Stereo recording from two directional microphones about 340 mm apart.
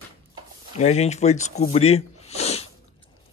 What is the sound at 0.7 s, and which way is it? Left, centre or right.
Speech, centre.